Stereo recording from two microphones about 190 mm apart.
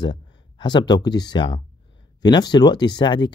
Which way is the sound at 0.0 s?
25° left (ahead or behind).